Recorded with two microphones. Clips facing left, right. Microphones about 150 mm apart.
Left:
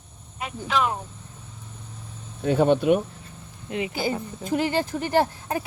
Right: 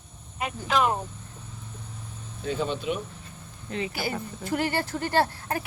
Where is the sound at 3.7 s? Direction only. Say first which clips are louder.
Left 4 dB; 15° left (ahead or behind).